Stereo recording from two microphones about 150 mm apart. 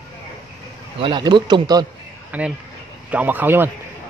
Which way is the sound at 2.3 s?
10° right (ahead or behind).